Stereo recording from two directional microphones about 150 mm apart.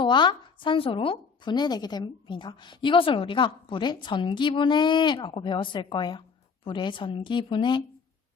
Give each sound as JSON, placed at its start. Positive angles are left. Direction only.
{"t": 0.0, "sound": "speech", "side_deg": 30}